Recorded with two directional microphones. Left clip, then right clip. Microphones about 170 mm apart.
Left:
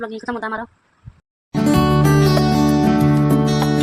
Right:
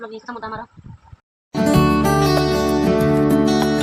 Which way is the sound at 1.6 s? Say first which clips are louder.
Even; centre (ahead or behind).